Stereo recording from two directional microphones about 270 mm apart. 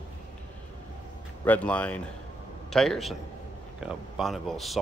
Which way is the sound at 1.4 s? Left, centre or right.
Centre.